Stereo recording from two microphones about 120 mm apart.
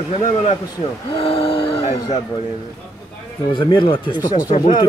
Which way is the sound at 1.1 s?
50° left (ahead or behind).